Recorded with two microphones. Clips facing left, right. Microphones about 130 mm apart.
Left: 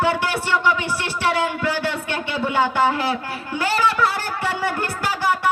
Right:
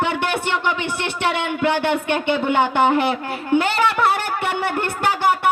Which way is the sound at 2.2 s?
25° right (ahead or behind).